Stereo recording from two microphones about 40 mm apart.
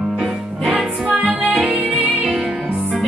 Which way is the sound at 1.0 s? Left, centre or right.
Right.